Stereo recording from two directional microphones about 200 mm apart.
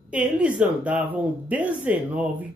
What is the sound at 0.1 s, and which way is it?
Speech, 5° right (ahead or behind).